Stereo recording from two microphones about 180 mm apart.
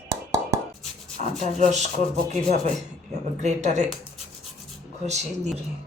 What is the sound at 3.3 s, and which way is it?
Speech, 40° right (ahead or behind).